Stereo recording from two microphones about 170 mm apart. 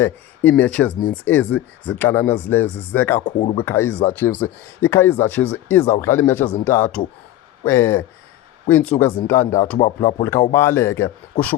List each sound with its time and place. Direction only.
0.0 s speech: 10° left (ahead or behind)